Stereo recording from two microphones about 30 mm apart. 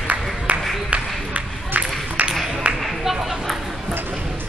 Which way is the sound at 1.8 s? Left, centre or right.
Right.